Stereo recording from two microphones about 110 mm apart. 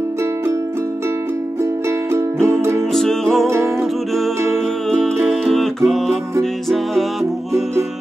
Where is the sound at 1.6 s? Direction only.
20° right (ahead or behind).